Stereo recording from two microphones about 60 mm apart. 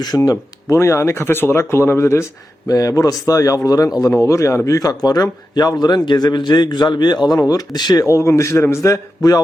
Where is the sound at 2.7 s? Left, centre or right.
Left.